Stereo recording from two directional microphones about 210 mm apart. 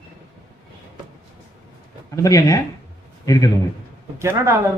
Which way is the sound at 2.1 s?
15° left (ahead or behind).